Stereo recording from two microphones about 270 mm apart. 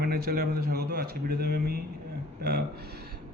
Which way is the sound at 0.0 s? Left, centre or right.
Right.